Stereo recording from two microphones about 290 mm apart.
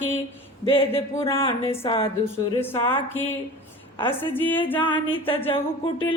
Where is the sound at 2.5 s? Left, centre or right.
Centre.